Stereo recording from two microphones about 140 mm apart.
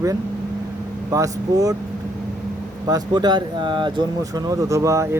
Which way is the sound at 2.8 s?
30° right (ahead or behind).